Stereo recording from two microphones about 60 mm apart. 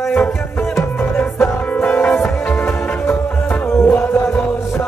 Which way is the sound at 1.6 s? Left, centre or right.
Left.